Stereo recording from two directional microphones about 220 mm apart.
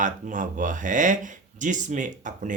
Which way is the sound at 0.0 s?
35° right (ahead or behind).